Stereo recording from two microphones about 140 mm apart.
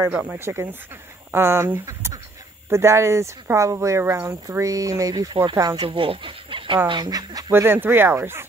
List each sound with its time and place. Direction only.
0.1 s speech: 10° right (ahead or behind); by 5.9 s 30° right (ahead or behind)
5.9 s speech: 40° right (ahead or behind)
7.6 s speech: 15° right (ahead or behind)